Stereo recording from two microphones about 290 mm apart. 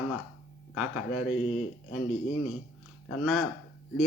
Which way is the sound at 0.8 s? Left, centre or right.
Centre.